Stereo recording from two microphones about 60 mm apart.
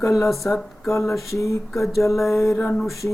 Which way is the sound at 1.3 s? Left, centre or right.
Left.